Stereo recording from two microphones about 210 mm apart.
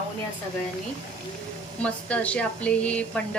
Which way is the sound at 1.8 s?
5° left (ahead or behind).